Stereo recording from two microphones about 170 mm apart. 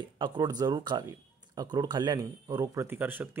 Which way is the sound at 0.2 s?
25° right (ahead or behind).